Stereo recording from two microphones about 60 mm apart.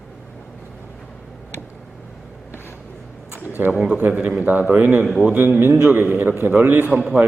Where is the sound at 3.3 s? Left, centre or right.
Left.